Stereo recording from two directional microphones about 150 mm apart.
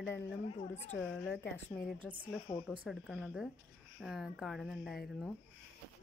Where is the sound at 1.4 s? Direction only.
15° left (ahead or behind).